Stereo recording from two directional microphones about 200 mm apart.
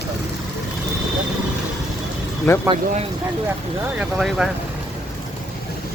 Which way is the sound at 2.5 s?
15° left (ahead or behind).